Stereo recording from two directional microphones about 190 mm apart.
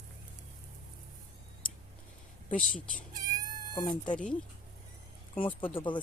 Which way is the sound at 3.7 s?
25° left (ahead or behind).